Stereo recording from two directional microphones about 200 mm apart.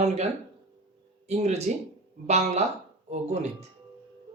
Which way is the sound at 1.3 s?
35° right (ahead or behind).